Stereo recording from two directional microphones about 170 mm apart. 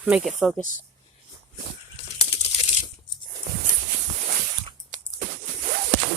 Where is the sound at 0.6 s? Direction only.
50° left (ahead or behind).